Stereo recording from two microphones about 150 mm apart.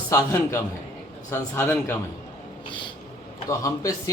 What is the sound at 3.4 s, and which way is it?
Speech, 20° left (ahead or behind).